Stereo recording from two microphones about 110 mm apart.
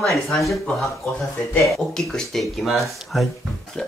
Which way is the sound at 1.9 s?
5° left (ahead or behind).